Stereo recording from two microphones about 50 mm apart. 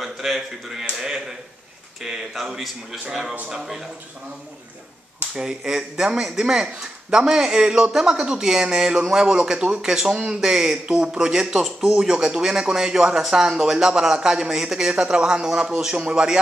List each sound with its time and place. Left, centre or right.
0.0 s speech: centre
2.0 s speech: centre
5.3 s speech: centre